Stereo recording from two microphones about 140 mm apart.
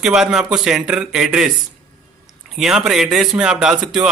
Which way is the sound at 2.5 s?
5° right (ahead or behind).